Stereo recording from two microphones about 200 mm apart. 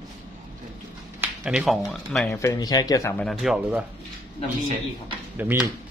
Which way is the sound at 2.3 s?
15° left (ahead or behind).